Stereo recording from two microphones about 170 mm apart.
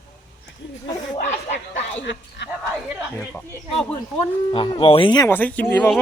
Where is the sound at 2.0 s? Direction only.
90° left.